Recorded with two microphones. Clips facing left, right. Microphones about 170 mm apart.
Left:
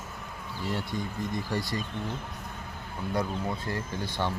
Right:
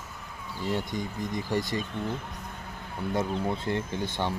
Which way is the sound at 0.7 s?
15° right (ahead or behind).